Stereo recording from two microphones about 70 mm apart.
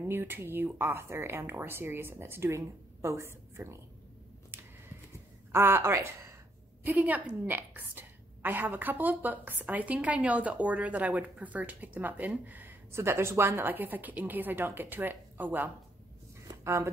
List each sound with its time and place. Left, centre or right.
0.0 s speech: right
4.5 s a sound: right
5.5 s speech: right
6.8 s a woman's voice: right
12.9 s a woman's voice: right
16.6 s speech: right